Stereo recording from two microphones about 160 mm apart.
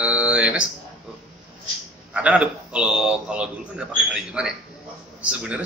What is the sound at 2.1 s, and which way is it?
A man's voice, 5° right (ahead or behind).